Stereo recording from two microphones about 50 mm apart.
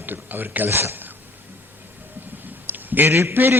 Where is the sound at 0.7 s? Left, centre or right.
Right.